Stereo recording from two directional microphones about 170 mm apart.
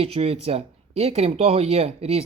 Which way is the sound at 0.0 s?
35° right (ahead or behind).